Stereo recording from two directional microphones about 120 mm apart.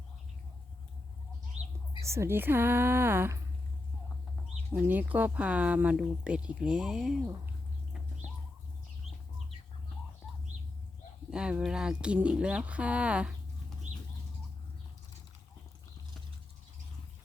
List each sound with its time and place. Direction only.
2.0 s speech: 25° right (ahead or behind)
4.7 s speech: 15° right (ahead or behind)
11.3 s speech: 5° right (ahead or behind)
13.9 s bird: 85° right